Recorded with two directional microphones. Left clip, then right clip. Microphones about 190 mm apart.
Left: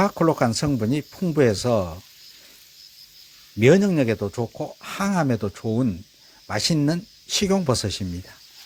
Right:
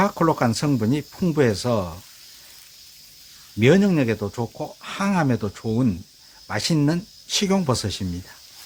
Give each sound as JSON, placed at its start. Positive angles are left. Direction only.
{"t": 0.0, "sound": "speech", "side_deg": 20}
{"t": 3.6, "sound": "speech", "side_deg": 20}